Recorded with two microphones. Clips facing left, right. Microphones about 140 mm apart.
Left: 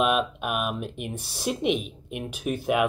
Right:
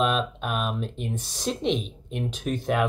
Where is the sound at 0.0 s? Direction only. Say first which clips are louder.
Left 1 dB; 10° left (ahead or behind).